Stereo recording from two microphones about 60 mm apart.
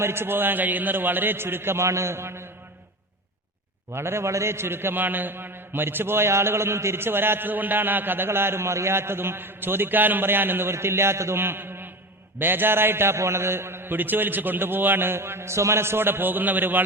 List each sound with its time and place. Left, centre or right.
0.0 s a man's voice: right
3.9 s a man's voice: right